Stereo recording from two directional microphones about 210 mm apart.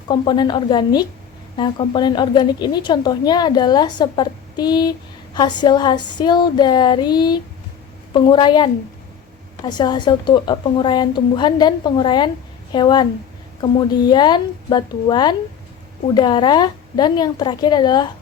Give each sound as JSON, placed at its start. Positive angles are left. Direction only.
{"t": 0.1, "sound": "speech", "side_deg": 20}